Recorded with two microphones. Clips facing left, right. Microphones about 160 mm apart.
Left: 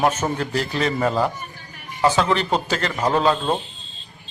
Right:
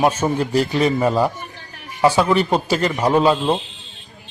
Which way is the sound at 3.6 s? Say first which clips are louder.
Right 1 dB; 75° right (ahead or behind).